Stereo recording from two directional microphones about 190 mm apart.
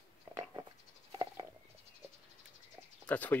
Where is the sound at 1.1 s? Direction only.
20° right (ahead or behind).